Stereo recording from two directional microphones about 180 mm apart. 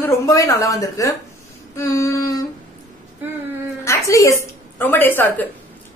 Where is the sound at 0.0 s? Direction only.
20° left (ahead or behind).